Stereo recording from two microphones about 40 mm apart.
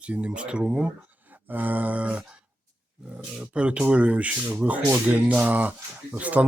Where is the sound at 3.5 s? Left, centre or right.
Right.